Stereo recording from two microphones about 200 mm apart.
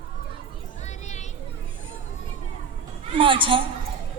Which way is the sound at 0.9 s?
35° left (ahead or behind).